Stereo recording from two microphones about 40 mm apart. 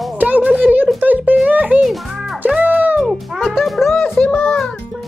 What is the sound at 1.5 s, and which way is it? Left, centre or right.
Music, right.